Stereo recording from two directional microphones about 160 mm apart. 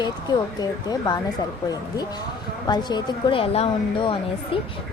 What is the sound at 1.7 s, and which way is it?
A woman's voice, 25° left (ahead or behind).